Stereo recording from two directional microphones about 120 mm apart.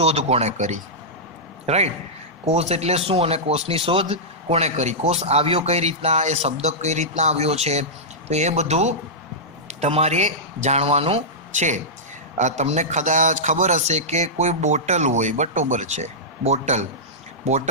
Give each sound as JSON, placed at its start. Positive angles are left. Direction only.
{"t": 0.0, "sound": "a man's voice", "side_deg": -65}
{"t": 4.1, "sound": "a man's voice", "side_deg": -60}
{"t": 12.4, "sound": "a man's voice", "side_deg": -75}